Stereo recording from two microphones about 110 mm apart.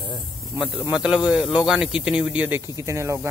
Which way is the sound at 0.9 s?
10° right (ahead or behind).